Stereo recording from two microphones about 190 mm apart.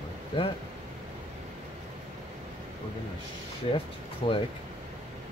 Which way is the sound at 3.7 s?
30° left (ahead or behind).